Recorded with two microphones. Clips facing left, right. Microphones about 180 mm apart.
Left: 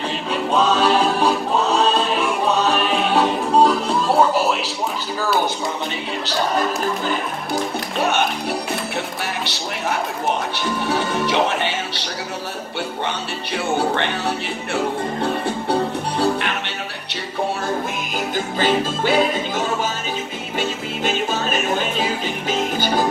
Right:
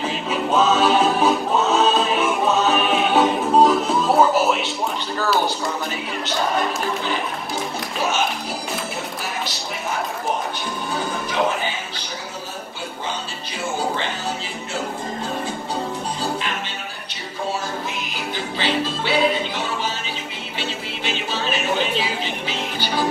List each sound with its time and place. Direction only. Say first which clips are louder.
0.0 s music: even; centre (ahead or behind)
5.2 s a sound: even; centre (ahead or behind)
9.4 s a sound: left 2 dB; 70° left (ahead or behind)
10.5 s music: left 5 dB; 75° left (ahead or behind)
13.7 s music: left 3 dB; 65° left (ahead or behind)
15.4 s music: left 6 dB; 65° left (ahead or behind)
18.1 s music: left 8 dB; 45° left (ahead or behind)